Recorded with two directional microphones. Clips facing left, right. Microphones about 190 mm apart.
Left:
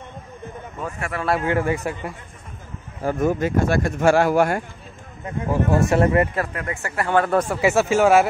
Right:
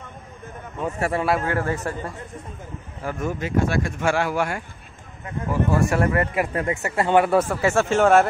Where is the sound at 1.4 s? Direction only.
15° left (ahead or behind).